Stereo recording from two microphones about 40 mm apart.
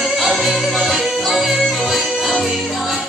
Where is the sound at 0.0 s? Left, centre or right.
Centre.